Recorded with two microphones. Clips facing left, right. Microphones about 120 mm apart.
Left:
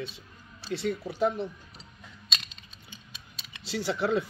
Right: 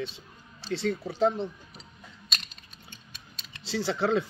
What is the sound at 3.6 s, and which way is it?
Speech, 30° right (ahead or behind).